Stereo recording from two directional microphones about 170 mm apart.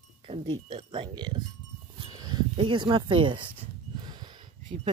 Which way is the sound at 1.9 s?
25° right (ahead or behind).